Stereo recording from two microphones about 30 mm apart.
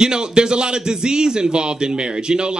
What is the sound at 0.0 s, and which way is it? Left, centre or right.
A man's voice, right.